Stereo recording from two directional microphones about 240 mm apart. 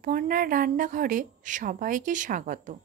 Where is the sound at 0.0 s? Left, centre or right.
Right.